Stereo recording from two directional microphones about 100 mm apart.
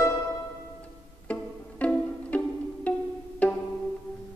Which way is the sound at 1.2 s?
15° left (ahead or behind).